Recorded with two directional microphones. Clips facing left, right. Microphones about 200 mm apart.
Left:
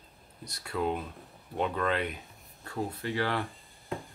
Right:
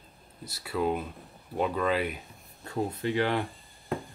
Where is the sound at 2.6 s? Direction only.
20° right (ahead or behind).